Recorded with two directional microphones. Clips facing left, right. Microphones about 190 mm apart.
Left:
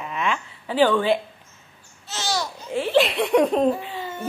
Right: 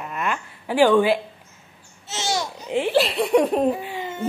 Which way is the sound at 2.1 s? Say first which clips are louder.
Right 1 dB; 25° right (ahead or behind).